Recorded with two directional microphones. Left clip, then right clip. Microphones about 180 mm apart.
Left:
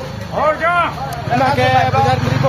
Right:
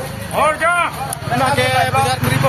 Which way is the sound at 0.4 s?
20° left (ahead or behind).